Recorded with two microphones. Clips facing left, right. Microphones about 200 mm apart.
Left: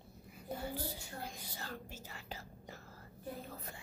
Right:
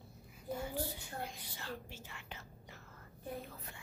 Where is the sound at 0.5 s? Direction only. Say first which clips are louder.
Right 1 dB; 35° left (ahead or behind).